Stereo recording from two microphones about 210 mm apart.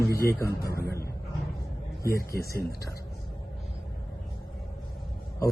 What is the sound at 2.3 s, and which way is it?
Speech, 45° left (ahead or behind).